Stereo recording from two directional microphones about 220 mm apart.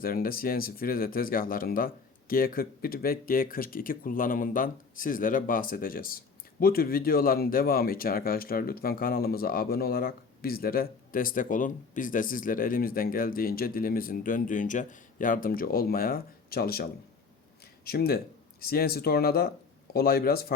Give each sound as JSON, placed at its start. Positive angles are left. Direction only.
{"t": 0.0, "sound": "speech", "side_deg": 40}
{"t": 17.8, "sound": "speech", "side_deg": 45}